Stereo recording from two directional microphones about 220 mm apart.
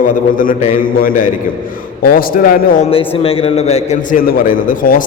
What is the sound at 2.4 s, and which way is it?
Speech, 40° left (ahead or behind).